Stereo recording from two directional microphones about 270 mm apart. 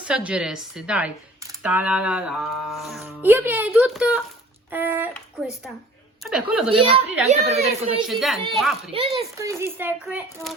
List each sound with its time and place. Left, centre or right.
0.0 s a child's voice: centre
6.7 s a woman's voice: centre
8.0 s speech: centre
8.9 s a child's voice: right; by 10.5 s centre